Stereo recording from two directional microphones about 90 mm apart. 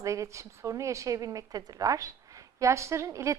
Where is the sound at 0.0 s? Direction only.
35° right (ahead or behind).